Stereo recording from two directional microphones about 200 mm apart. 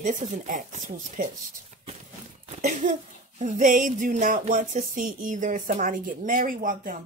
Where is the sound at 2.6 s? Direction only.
35° right (ahead or behind).